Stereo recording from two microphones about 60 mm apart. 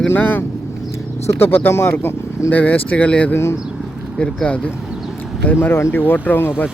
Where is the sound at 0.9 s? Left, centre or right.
Left.